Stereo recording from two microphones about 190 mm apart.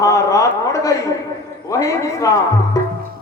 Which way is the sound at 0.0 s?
15° left (ahead or behind).